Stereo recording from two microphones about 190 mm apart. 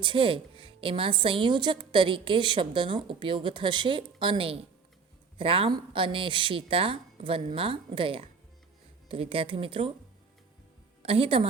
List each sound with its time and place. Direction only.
0.0 s a woman's voice: 25° right (ahead or behind)
11.0 s a woman's voice: 30° right (ahead or behind)